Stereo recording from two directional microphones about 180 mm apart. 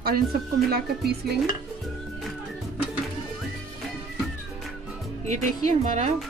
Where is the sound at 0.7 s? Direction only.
60° right (ahead or behind).